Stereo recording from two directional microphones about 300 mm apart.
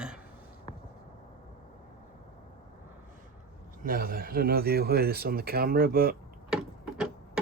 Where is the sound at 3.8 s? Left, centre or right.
Right.